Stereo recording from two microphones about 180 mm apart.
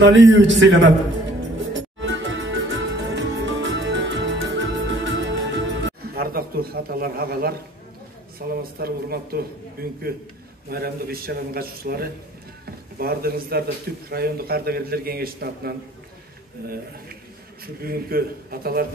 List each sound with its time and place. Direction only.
0.0 s a man's voice: 90° right
1.7 s music: 90° right; by 7.5 s 60° right (ahead or behind)
8.4 s a man's voice: 60° right (ahead or behind)
17.8 s a man's voice: 55° right (ahead or behind)